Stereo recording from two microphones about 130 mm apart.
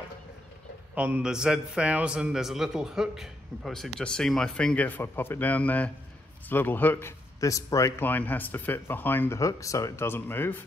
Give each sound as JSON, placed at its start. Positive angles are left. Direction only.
{"t": 0.9, "sound": "a man's voice", "side_deg": -10}